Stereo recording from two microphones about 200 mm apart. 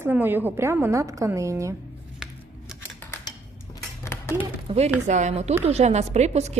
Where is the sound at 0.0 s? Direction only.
10° right (ahead or behind).